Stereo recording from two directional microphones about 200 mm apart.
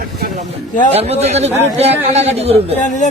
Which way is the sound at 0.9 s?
30° right (ahead or behind).